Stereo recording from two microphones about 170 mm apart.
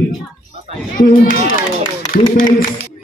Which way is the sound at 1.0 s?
55° left (ahead or behind).